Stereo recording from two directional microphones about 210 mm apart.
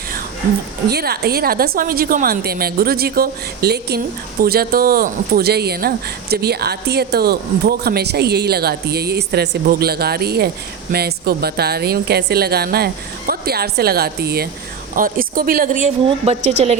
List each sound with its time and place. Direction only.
0.9 s a woman's voice: 50° right (ahead or behind); by 16.7 s 30° right (ahead or behind)